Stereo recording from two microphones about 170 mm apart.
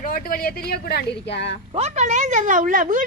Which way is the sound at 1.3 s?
80° left.